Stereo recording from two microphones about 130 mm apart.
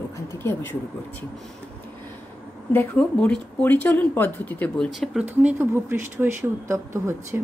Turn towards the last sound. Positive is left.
turn(degrees=-20)  # may be behind; listen again after turning